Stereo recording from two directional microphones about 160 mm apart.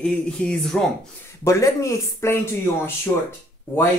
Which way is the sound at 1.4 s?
20° left (ahead or behind).